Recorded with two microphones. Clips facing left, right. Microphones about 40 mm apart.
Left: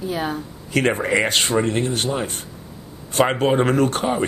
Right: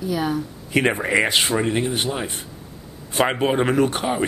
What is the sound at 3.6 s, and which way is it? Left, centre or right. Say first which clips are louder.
Speech: left 1 dB; centre.